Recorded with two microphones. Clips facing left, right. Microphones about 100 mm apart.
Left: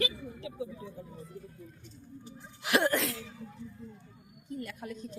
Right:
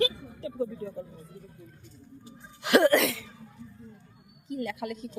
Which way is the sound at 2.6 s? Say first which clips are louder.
Right 7 dB; 60° right (ahead or behind).